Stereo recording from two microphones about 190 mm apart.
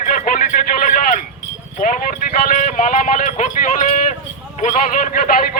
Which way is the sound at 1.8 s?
45° left (ahead or behind).